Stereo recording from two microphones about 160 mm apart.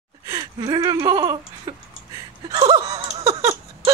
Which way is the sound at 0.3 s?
25° right (ahead or behind).